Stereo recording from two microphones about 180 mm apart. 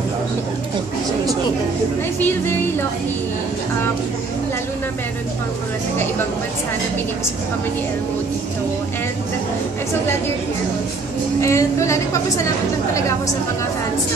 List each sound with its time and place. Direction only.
2.1 s a woman's voice: 10° left (ahead or behind)
11.4 s a woman's voice: 15° left (ahead or behind)